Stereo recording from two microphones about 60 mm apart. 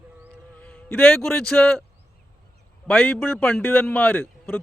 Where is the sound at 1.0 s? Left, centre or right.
Centre.